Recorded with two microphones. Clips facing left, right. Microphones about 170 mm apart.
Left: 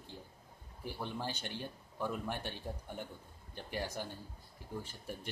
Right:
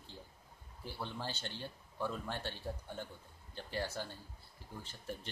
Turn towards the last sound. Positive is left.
turn(degrees=10)  # may be behind; listen again after turning